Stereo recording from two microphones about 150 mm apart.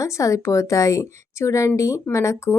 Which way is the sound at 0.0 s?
20° left (ahead or behind).